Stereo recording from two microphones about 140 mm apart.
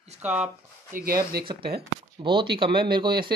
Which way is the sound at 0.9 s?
90° right.